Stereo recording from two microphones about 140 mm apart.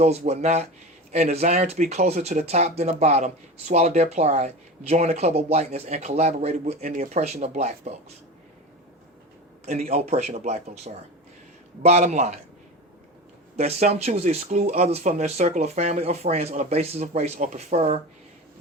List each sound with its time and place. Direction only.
0.3 s speech: 50° right (ahead or behind)
6.9 s speech: 75° right (ahead or behind)
7.2 s speech: 50° right (ahead or behind)
9.6 s speech: 55° right (ahead or behind)
13.6 s speech: 50° right (ahead or behind)